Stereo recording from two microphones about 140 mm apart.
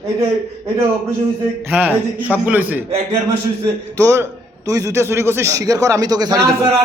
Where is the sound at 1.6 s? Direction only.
10° right (ahead or behind).